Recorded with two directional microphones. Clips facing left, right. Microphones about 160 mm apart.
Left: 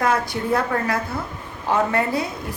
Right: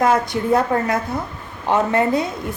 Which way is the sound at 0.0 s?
20° right (ahead or behind).